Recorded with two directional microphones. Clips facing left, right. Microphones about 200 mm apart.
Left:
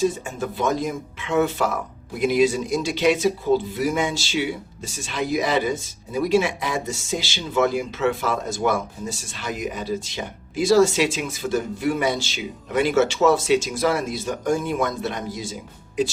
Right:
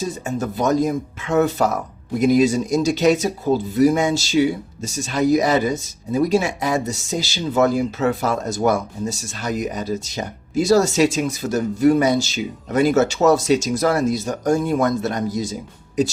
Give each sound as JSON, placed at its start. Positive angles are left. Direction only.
{"t": 0.3, "sound": "speech", "side_deg": -40}